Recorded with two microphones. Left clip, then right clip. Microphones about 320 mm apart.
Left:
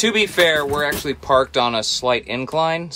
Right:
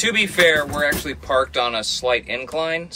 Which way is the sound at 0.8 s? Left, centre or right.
Centre.